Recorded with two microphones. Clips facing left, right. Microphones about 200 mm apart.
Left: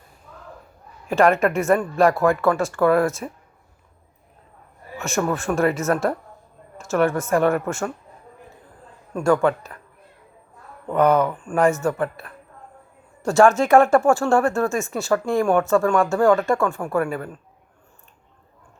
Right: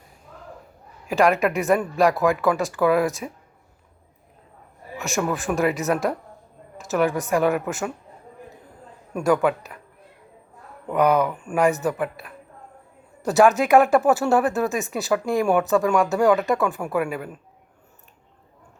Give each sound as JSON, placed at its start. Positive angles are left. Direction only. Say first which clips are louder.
{"t": 1.0, "sound": "speech", "louder": "left 2 dB", "side_deg": 0}
{"t": 4.9, "sound": "speech", "louder": "left 2 dB", "side_deg": 0}
{"t": 5.8, "sound": "speech", "louder": "left 1 dB", "side_deg": -15}
{"t": 6.7, "sound": "a sound", "louder": "left 2 dB", "side_deg": 0}
{"t": 7.3, "sound": "speech", "louder": "left 2 dB", "side_deg": 0}
{"t": 9.1, "sound": "speech", "louder": "left 1 dB", "side_deg": -15}
{"t": 10.8, "sound": "speech", "louder": "left 2 dB", "side_deg": -10}
{"t": 13.2, "sound": "speech", "louder": "left 1 dB", "side_deg": -5}